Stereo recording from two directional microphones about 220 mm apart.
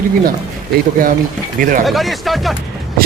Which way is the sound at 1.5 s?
35° right (ahead or behind).